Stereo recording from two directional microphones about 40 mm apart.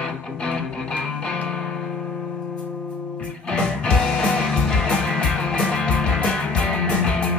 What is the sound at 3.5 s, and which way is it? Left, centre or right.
Music, left.